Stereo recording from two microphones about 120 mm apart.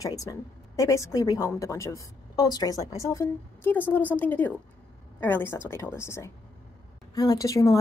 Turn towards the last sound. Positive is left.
turn(degrees=25)  # may be behind; listen again after turning